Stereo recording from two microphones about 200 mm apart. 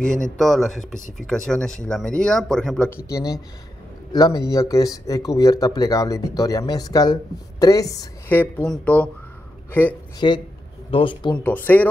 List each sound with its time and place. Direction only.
0.0 s speech: 5° left (ahead or behind)
3.1 s a man's voice: 15° left (ahead or behind)
10.2 s speech: 25° left (ahead or behind)
11.3 s speech: 10° left (ahead or behind)